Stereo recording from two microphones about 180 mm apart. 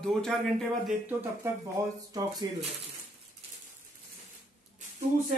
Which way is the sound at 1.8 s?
20° right (ahead or behind).